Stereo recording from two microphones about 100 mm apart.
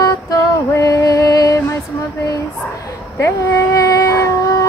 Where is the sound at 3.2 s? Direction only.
30° left (ahead or behind).